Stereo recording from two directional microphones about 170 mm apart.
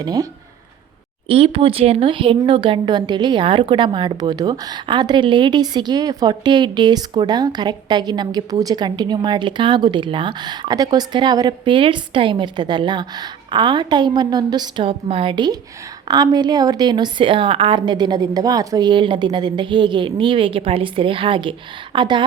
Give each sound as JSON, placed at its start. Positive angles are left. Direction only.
{"t": 0.0, "sound": "speech", "side_deg": -25}
{"t": 1.3, "sound": "speech", "side_deg": -30}